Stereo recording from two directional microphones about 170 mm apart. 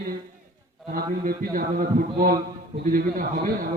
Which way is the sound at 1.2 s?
55° right (ahead or behind).